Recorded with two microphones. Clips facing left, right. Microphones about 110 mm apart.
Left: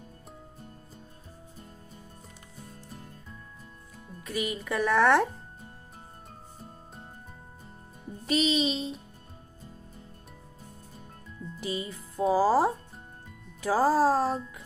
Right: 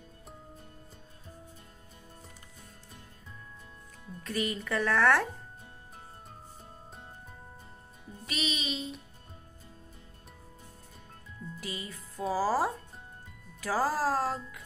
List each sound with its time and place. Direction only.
4.2 s speech: 10° left (ahead or behind)
8.3 s music: 30° left (ahead or behind)
11.6 s speech: 20° left (ahead or behind)